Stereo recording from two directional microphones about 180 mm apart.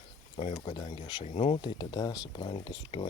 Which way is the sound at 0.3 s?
30° left (ahead or behind).